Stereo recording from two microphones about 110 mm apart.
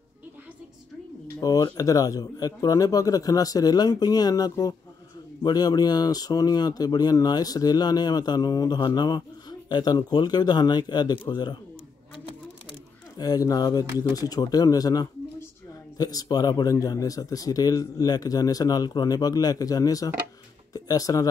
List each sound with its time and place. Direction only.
1.4 s speech: 35° left (ahead or behind)
13.2 s speech: 35° left (ahead or behind)